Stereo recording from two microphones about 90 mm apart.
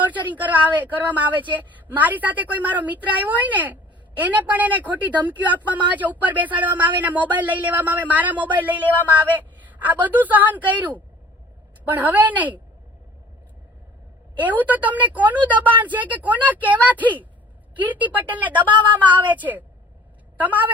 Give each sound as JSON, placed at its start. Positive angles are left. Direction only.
{"t": 0.0, "sound": "a woman's voice", "side_deg": -20}
{"t": 14.3, "sound": "a woman's voice", "side_deg": -20}
{"t": 18.7, "sound": "a woman's voice", "side_deg": -60}
{"t": 18.9, "sound": "a woman's voice", "side_deg": -20}